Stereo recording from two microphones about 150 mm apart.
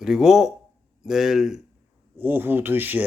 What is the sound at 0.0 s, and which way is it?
A man's voice, 5° right (ahead or behind).